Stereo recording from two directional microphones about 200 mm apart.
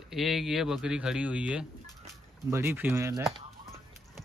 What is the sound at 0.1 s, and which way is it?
Speech, centre (ahead or behind).